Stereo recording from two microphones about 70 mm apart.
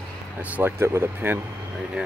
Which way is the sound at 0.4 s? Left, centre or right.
Right.